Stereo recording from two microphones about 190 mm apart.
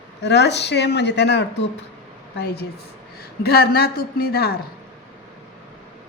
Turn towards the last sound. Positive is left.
turn(degrees=55)  # may be behind; listen again after turning